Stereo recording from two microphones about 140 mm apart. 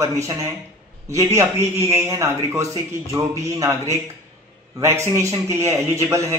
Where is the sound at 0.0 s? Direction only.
20° right (ahead or behind).